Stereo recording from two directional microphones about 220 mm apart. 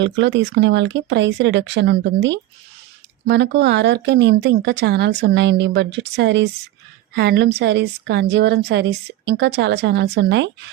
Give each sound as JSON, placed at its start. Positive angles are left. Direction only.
{"t": 0.0, "sound": "a woman's voice", "side_deg": -55}